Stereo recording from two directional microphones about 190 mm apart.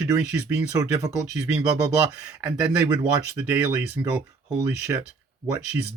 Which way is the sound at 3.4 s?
10° right (ahead or behind).